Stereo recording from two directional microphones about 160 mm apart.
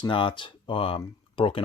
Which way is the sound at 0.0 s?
35° left (ahead or behind).